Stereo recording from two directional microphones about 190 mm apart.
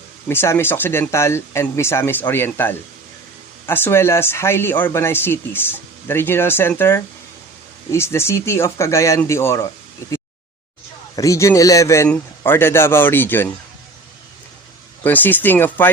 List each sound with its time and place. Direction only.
0.3 s speech: 10° left (ahead or behind)
11.2 s speech: 15° left (ahead or behind)
15.0 s speech: 10° left (ahead or behind)